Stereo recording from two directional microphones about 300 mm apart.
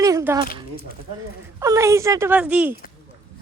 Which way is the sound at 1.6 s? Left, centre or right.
Centre.